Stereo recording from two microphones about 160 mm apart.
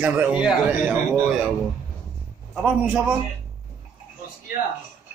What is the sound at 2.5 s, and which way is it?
Speech, 5° right (ahead or behind).